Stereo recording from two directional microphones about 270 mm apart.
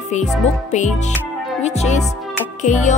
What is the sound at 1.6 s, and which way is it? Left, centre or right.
Music, left.